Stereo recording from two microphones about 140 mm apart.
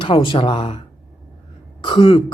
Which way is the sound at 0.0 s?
40° left (ahead or behind).